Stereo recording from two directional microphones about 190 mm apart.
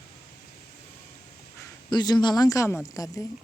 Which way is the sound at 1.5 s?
20° left (ahead or behind).